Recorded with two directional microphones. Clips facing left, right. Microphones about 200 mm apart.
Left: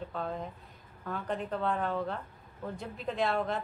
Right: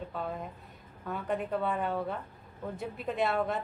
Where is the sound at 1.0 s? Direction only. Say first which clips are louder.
Right 2 dB; 5° right (ahead or behind).